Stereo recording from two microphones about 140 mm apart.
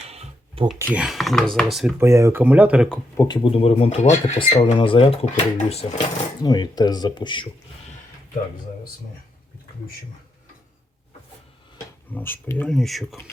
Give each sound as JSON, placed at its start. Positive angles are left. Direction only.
{"t": 0.0, "sound": "a sound", "side_deg": -45}
{"t": 0.8, "sound": "speech", "side_deg": -10}
{"t": 2.0, "sound": "speech", "side_deg": -20}
{"t": 3.2, "sound": "speech", "side_deg": 30}
{"t": 3.4, "sound": "speech", "side_deg": 45}
{"t": 4.4, "sound": "speech", "side_deg": 40}
{"t": 6.4, "sound": "speech", "side_deg": 30}
{"t": 12.1, "sound": "speech", "side_deg": 15}